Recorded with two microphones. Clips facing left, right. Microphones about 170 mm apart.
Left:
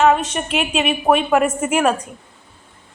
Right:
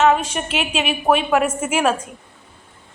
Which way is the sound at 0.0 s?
Centre (ahead or behind).